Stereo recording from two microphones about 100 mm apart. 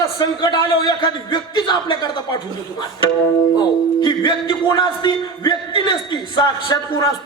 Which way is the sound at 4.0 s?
50° left (ahead or behind).